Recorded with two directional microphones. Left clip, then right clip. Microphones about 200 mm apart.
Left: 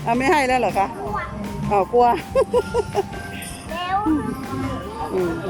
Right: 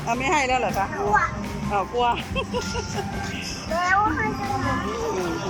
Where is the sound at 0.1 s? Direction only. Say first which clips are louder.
Left 4 dB; 20° left (ahead or behind).